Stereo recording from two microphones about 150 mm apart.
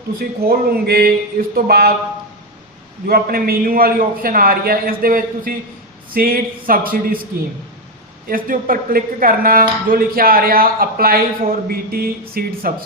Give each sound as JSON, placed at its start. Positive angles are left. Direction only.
{"t": 0.2, "sound": "a sound", "side_deg": -85}
{"t": 3.1, "sound": "speech", "side_deg": -85}
{"t": 8.3, "sound": "speech", "side_deg": -70}